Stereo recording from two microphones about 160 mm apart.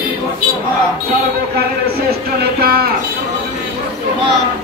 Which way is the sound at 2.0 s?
75° right (ahead or behind).